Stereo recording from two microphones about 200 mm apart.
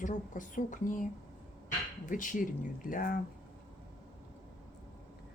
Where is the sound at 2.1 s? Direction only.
40° left (ahead or behind).